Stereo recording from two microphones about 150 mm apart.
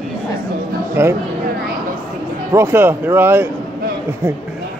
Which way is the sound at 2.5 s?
15° right (ahead or behind).